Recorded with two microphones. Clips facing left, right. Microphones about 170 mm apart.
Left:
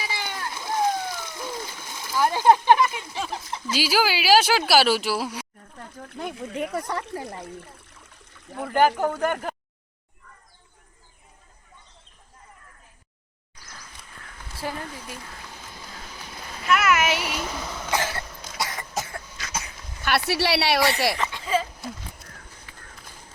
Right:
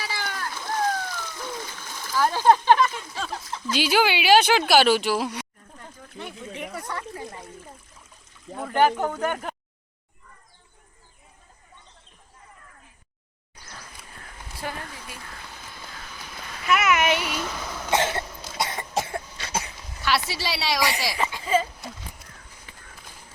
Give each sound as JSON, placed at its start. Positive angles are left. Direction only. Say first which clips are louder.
{"t": 0.0, "sound": "splash", "louder": "even", "side_deg": 20}
{"t": 3.8, "sound": "speech", "louder": "right 1 dB", "side_deg": 5}
{"t": 6.2, "sound": "speech", "louder": "left 5 dB", "side_deg": 65}
{"t": 7.5, "sound": "water", "louder": "left 2 dB", "side_deg": 70}
{"t": 8.4, "sound": "speech", "louder": "left 1 dB", "side_deg": 5}
{"t": 16.6, "sound": "a sound", "louder": "even", "side_deg": 0}
{"t": 17.9, "sound": "cough", "louder": "right 4 dB", "side_deg": -25}
{"t": 20.0, "sound": "a sound", "louder": "left 3 dB", "side_deg": 55}
{"t": 21.2, "sound": "a sound", "louder": "right 2 dB", "side_deg": -5}